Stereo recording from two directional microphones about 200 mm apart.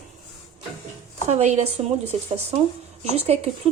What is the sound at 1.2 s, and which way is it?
Speech, 35° right (ahead or behind).